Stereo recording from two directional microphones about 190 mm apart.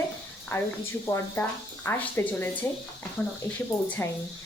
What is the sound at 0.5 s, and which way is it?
Speech, 15° left (ahead or behind).